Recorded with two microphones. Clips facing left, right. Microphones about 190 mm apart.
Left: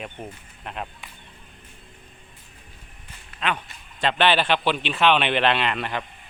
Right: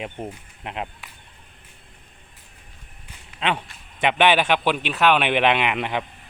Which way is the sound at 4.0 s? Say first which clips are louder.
Right 2 dB; 15° right (ahead or behind).